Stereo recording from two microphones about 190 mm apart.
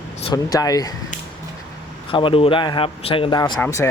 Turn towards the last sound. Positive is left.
turn(degrees=10)  # may be behind; listen again after turning